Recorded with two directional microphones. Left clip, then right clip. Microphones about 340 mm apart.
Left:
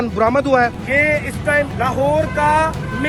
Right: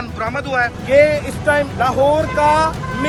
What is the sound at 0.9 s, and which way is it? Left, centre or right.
Speech, centre.